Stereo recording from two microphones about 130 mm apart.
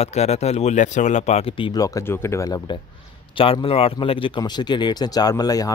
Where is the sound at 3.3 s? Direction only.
45° left (ahead or behind).